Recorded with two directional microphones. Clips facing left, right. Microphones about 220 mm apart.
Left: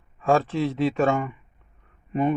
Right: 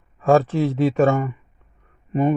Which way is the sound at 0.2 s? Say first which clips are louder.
Right 5 dB; 45° right (ahead or behind).